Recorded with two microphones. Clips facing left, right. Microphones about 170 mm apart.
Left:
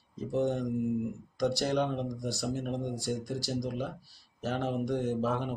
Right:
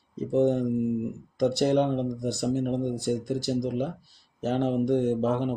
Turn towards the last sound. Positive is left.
turn(degrees=-20)  # may be behind; listen again after turning